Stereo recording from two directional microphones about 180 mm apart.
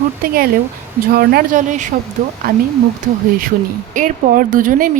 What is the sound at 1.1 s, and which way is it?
Speech, 60° right (ahead or behind).